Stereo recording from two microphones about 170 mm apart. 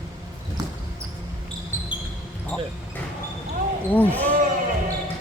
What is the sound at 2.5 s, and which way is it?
Basketball bounce, 5° left (ahead or behind).